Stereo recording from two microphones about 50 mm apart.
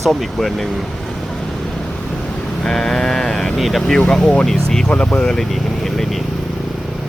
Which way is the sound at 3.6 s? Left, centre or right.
Centre.